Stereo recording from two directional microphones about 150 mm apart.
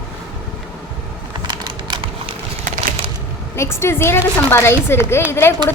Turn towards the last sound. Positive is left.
turn(degrees=15)  # may be behind; listen again after turning